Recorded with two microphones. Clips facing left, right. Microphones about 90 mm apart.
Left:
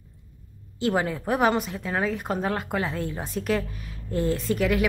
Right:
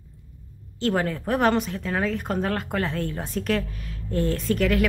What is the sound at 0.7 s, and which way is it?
A woman's voice, 10° left (ahead or behind).